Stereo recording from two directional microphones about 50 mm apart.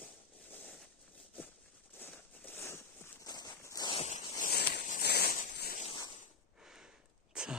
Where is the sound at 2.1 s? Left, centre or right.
Left.